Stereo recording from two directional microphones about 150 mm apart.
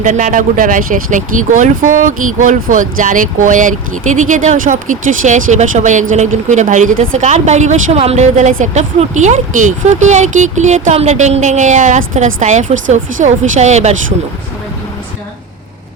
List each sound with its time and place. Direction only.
0.0 s a woman's voice: 55° right (ahead or behind)